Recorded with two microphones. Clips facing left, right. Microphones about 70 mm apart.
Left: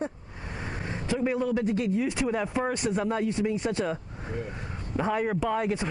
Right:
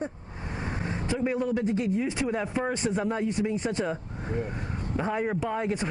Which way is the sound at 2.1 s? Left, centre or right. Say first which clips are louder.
Left 1 dB; centre.